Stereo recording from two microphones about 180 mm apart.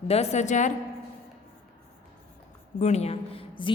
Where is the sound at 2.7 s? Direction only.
40° left (ahead or behind).